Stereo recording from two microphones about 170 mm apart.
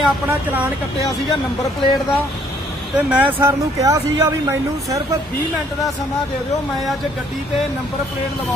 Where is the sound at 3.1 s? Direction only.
10° right (ahead or behind).